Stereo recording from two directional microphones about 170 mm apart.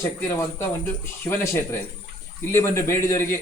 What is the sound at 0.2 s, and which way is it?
A man's voice, 15° left (ahead or behind).